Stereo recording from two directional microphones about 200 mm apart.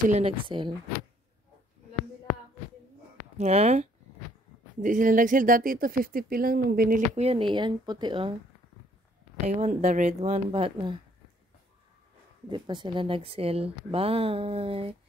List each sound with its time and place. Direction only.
0.1 s speech: 25° right (ahead or behind)
3.3 s a woman's voice: 35° right (ahead or behind)
7.2 s speech: 30° right (ahead or behind)
9.6 s a woman's voice: 35° right (ahead or behind)
12.4 s speech: 25° right (ahead or behind)